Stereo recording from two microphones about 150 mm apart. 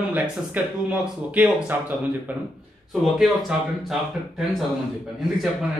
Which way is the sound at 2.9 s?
Centre (ahead or behind).